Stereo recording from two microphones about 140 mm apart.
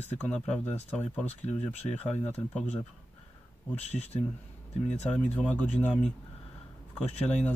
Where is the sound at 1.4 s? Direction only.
45° left (ahead or behind).